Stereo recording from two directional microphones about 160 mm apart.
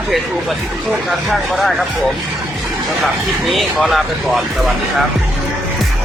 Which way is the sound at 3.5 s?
5° right (ahead or behind).